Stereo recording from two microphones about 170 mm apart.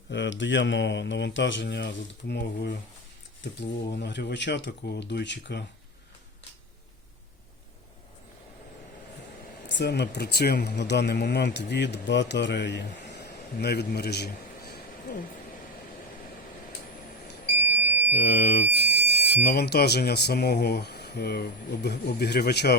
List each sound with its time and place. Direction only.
0.1 s speech: 90° left
3.8 s speech: 85° left
9.6 s speech: 80° left; by 15.2 s 60° left (ahead or behind)
18.1 s speech: 70° left (ahead or behind)